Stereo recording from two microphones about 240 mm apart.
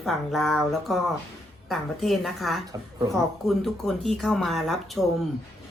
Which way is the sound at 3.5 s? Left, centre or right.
Centre.